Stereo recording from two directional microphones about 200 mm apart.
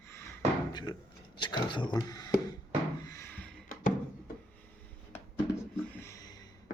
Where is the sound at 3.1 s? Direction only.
10° left (ahead or behind).